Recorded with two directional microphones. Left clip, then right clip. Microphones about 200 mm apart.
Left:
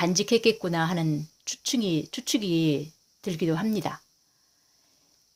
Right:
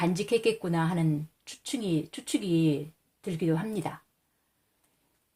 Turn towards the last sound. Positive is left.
turn(degrees=40)  # may be behind; listen again after turning